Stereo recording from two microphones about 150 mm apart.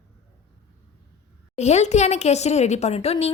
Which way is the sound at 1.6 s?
50° left (ahead or behind).